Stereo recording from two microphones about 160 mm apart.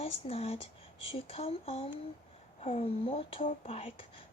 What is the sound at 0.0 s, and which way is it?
Speech, 40° left (ahead or behind).